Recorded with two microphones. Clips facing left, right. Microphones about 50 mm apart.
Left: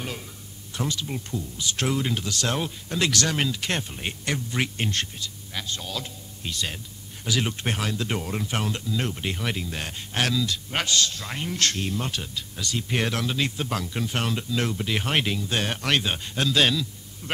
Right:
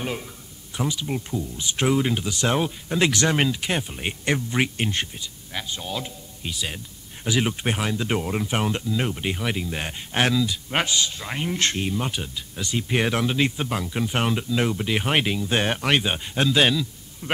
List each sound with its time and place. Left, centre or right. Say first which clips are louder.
0.0 s speech: right 5 dB; centre
4.3 s speech: right 5 dB; right